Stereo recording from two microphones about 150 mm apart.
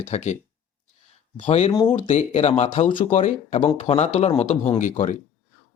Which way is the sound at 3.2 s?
55° left (ahead or behind).